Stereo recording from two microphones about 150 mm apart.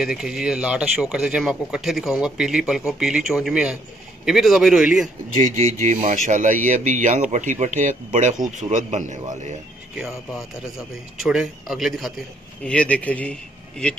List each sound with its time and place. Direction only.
0.0 s speech: 5° right (ahead or behind)
5.4 s speech: 55° right (ahead or behind)
9.9 s speech: centre (ahead or behind)